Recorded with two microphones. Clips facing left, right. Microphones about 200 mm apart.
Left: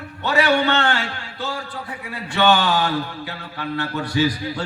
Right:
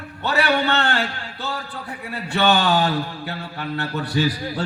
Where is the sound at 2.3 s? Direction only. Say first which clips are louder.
Even; 35° right (ahead or behind).